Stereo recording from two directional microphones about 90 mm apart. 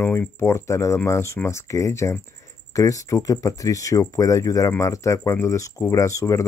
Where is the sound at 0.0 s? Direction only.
25° left (ahead or behind).